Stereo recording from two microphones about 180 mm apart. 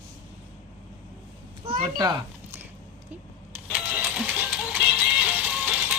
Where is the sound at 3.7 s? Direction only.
5° right (ahead or behind).